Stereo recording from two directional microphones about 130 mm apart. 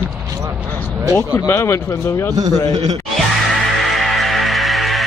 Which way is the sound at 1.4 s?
20° left (ahead or behind).